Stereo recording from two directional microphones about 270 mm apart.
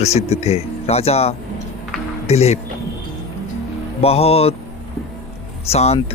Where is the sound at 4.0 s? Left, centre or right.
Left.